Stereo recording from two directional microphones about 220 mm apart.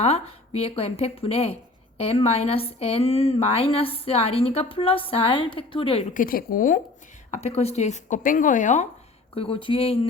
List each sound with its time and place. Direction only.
0.0 s a woman's voice: 30° left (ahead or behind)
6.2 s a woman's voice: 40° left (ahead or behind)